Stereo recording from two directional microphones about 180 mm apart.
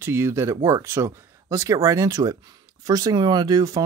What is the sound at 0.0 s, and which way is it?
Speech, 15° right (ahead or behind).